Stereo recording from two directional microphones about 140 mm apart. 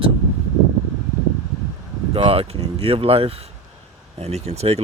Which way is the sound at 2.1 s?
45° right (ahead or behind).